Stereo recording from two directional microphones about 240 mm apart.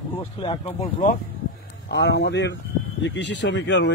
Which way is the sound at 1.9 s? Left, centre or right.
Left.